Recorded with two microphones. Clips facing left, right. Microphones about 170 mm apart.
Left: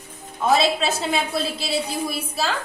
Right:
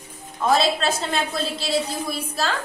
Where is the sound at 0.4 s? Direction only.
5° left (ahead or behind).